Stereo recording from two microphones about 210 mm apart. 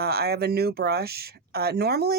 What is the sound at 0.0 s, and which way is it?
Speech, 50° right (ahead or behind).